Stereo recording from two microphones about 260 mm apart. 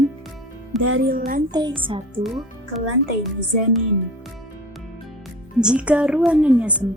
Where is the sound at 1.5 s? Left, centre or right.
Centre.